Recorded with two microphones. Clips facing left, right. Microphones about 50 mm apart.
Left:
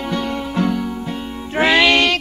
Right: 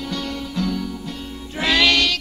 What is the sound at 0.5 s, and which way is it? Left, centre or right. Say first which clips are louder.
Music: left 5 dB; left.